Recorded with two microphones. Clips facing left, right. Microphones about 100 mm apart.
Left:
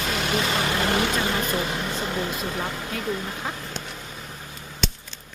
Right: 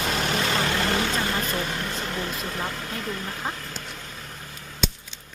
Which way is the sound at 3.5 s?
15° left (ahead or behind).